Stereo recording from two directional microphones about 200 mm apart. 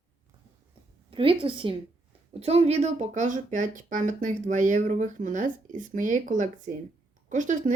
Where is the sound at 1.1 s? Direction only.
25° right (ahead or behind).